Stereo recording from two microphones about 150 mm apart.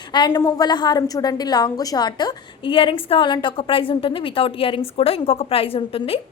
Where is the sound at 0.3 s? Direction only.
25° left (ahead or behind).